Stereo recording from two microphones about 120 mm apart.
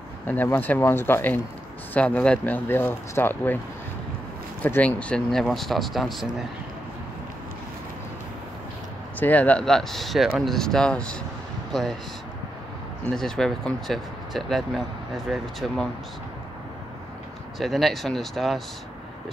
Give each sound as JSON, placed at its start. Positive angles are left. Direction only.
{"t": 0.3, "sound": "speech", "side_deg": 15}
{"t": 4.6, "sound": "speech", "side_deg": 15}
{"t": 9.2, "sound": "speech", "side_deg": 15}
{"t": 13.0, "sound": "speech", "side_deg": 5}
{"t": 17.6, "sound": "speech", "side_deg": 0}